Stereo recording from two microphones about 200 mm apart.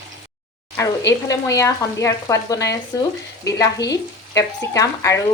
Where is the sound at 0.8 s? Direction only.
15° left (ahead or behind).